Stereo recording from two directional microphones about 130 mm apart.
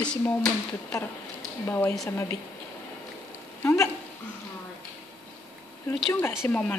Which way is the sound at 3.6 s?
20° left (ahead or behind).